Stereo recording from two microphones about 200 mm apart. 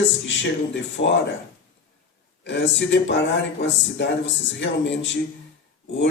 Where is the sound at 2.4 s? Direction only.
65° left (ahead or behind).